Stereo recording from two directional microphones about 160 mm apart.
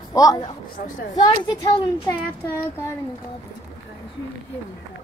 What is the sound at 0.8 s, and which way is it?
Speech, 55° left (ahead or behind).